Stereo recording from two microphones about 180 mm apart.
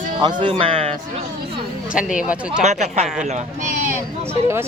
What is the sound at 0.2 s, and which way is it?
Speech, 25° right (ahead or behind).